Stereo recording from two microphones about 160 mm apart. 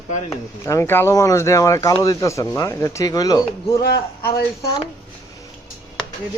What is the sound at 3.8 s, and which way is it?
Speech, 75° left (ahead or behind).